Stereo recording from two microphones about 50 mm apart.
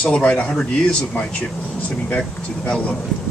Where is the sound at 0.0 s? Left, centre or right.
Left.